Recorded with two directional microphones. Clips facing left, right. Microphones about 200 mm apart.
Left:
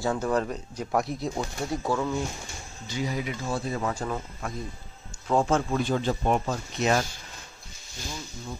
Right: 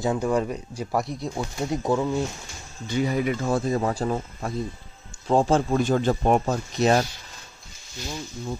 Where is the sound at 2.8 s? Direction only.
55° right (ahead or behind).